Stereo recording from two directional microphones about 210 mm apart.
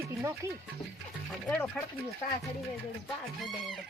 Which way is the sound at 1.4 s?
5° left (ahead or behind).